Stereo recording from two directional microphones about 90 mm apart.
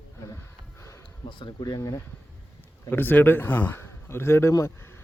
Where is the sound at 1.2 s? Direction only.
60° left (ahead or behind).